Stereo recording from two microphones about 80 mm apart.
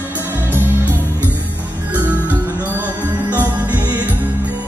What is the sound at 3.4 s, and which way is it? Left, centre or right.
Music, right.